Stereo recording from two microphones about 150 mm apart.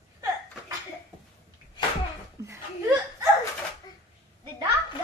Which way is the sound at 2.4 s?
20° right (ahead or behind).